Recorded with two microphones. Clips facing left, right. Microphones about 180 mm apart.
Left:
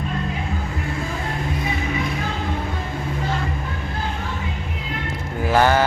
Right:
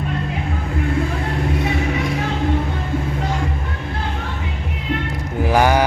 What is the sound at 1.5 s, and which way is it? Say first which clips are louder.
Music: right 3 dB; 70° right (ahead or behind).